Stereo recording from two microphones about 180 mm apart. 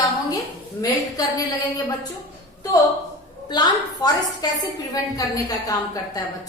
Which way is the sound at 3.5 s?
20° left (ahead or behind).